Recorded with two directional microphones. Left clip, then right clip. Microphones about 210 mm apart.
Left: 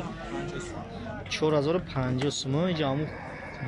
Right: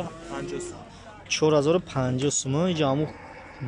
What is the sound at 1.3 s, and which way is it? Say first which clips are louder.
Speech: right 5 dB; 10° right (ahead or behind).